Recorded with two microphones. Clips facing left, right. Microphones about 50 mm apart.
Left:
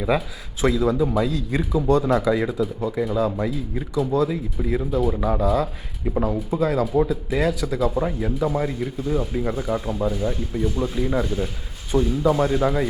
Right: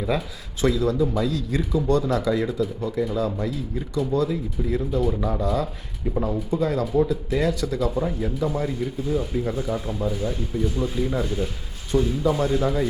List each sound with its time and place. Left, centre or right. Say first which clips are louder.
0.6 s speech: left 1 dB; centre
5.1 s speech: left 3 dB; centre
5.4 s speech: left 3 dB; centre